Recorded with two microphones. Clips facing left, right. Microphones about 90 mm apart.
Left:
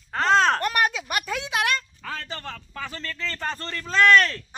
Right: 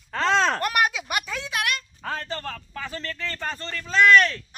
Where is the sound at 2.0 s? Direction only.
15° right (ahead or behind).